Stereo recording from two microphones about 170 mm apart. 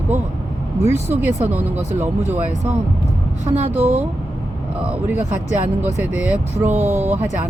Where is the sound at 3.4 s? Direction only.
35° right (ahead or behind).